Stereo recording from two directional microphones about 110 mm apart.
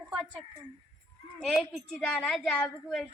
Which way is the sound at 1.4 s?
Centre (ahead or behind).